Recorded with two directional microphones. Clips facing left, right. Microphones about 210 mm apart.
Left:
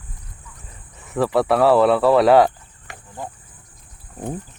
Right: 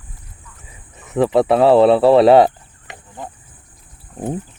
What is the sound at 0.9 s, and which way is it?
Speech, 20° right (ahead or behind).